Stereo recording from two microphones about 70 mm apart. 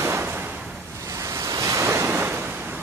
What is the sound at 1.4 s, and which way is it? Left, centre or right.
Waves, right.